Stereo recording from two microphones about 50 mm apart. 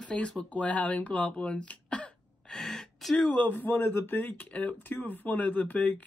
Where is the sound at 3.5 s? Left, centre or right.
Left.